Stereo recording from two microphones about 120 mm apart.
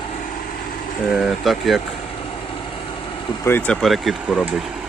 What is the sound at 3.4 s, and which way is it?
Speech, 15° left (ahead or behind).